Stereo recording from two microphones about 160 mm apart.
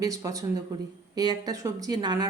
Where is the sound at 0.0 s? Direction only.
20° right (ahead or behind).